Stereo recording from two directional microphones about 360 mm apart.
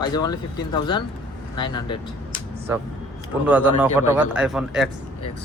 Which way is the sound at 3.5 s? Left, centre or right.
Centre.